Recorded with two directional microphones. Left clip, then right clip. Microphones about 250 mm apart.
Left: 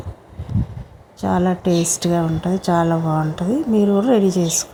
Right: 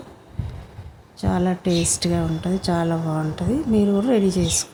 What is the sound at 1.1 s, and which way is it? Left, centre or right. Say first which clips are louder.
A woman's voice: left 4 dB; centre.